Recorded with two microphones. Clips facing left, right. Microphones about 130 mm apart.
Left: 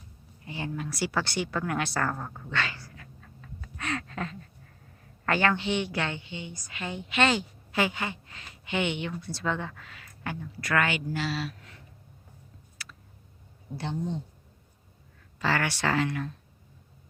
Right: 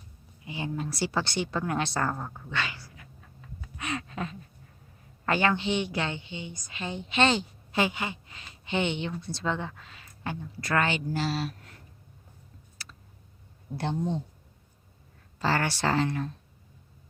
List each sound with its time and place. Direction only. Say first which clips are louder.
0.4 s a woman's voice: right 1 dB; 20° right (ahead or behind)
2.1 s a woman's voice: even; 5° right (ahead or behind)
2.5 s cat: left 2 dB; 15° right (ahead or behind)
3.6 s a sound: left 1 dB; 15° right (ahead or behind)
5.2 s a woman's voice: even; 20° right (ahead or behind); by 11.8 s 40° right (ahead or behind)
15.4 s speech: right 1 dB; 35° right (ahead or behind)